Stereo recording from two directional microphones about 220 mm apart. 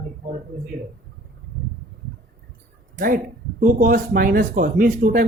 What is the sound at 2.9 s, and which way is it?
Speech, 40° right (ahead or behind).